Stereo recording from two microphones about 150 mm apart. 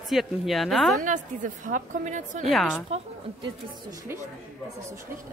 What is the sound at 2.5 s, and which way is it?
Speech, centre (ahead or behind).